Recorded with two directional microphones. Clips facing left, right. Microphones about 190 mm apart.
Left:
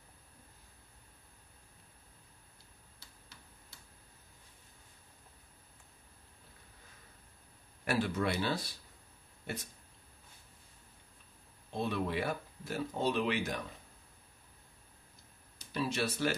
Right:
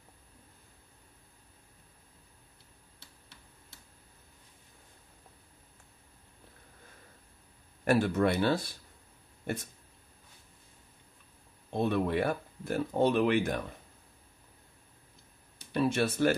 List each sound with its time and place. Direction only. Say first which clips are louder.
7.8 s speech: right 7 dB; 50° right (ahead or behind)
11.7 s speech: right 6 dB; 55° right (ahead or behind)
15.6 s speech: right 6 dB; 55° right (ahead or behind)